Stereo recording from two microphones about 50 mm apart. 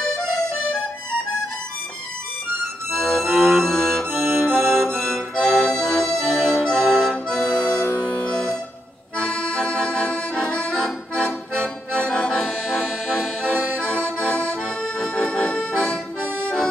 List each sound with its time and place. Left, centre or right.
2.9 s music: centre
4.1 s music: right
4.6 s accordion: centre
6.6 s music: centre
9.2 s accordion: centre